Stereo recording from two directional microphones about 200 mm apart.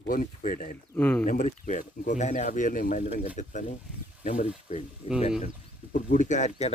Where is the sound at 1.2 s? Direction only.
40° left (ahead or behind).